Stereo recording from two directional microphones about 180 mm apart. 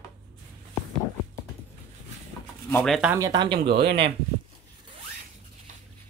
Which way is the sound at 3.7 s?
60° right (ahead or behind).